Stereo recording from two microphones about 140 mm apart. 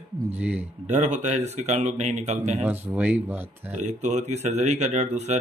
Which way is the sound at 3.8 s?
55° right (ahead or behind).